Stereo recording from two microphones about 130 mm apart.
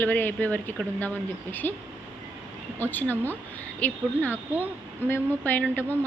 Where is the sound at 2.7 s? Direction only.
15° left (ahead or behind).